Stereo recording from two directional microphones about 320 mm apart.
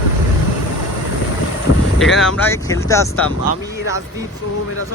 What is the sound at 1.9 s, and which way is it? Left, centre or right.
Speech, centre.